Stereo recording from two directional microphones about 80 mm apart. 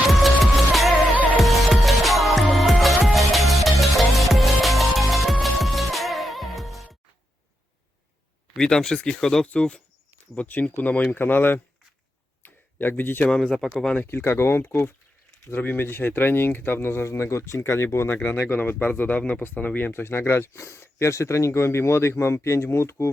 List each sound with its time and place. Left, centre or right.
0.7 s music: centre
1.1 s music: centre
1.4 s music: centre
8.5 s speech: centre; by 11.6 s left
12.4 s a sound: left
13.2 s speech: centre
13.9 s speech: left